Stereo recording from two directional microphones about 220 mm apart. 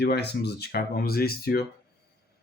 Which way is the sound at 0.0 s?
50° left (ahead or behind).